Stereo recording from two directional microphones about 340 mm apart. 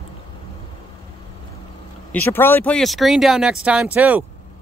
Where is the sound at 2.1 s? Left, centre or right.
Centre.